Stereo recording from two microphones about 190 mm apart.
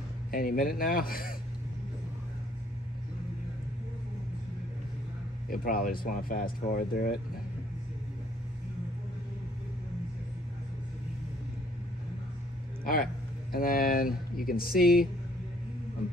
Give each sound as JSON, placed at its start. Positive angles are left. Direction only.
{"t": 0.3, "sound": "speech", "side_deg": 50}
{"t": 5.5, "sound": "speech", "side_deg": 50}
{"t": 12.8, "sound": "speech", "side_deg": 50}